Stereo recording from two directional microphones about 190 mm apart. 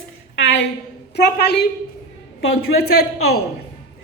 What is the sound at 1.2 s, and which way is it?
A woman's voice, 60° left (ahead or behind).